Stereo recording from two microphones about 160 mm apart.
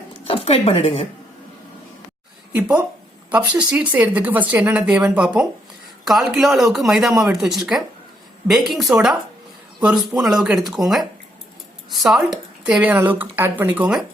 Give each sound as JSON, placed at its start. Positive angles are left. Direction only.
{"t": 0.3, "sound": "speech", "side_deg": 40}
{"t": 2.6, "sound": "speech", "side_deg": -10}